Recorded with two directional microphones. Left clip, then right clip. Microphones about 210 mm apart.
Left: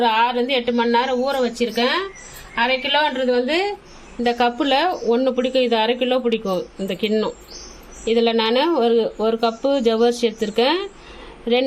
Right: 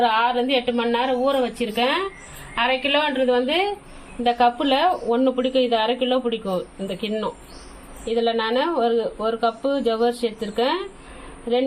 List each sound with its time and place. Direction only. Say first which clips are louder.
0.0 s a woman's voice: left 2 dB; 20° left (ahead or behind)